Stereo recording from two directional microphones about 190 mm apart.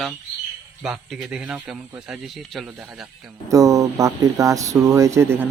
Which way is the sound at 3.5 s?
15° right (ahead or behind).